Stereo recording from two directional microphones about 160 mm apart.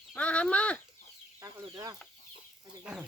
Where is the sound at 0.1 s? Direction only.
10° left (ahead or behind).